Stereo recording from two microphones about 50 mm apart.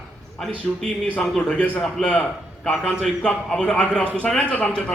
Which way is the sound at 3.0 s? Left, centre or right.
Centre.